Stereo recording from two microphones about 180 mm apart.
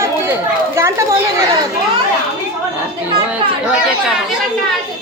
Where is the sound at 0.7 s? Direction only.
15° right (ahead or behind).